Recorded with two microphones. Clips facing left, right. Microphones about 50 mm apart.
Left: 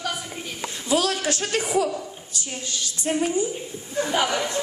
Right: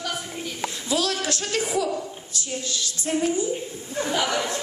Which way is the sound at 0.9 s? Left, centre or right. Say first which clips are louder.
Left 3 dB; left.